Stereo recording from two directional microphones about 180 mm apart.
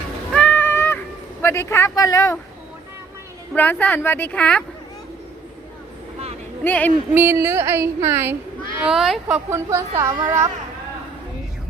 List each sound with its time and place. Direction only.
0.3 s music: 10° left (ahead or behind)
1.4 s a woman's voice: 15° left (ahead or behind)
3.5 s a woman's voice: 10° left (ahead or behind)
6.7 s a woman's voice: 10° left (ahead or behind)
7.1 s a woman's voice: 10° right (ahead or behind)
8.8 s speech: centre (ahead or behind)
9.2 s a woman's voice: 15° right (ahead or behind)